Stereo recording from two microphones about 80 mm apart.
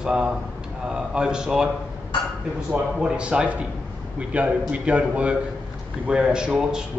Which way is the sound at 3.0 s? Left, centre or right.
Centre.